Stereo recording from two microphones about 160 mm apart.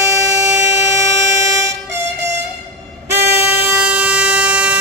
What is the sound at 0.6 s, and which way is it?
Train, 20° right (ahead or behind).